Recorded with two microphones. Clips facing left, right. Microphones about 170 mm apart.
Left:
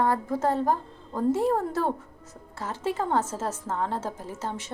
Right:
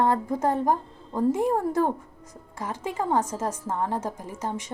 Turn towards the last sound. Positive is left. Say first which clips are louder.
# right 2 dB
turn(degrees=-15)  # may be behind; listen again after turning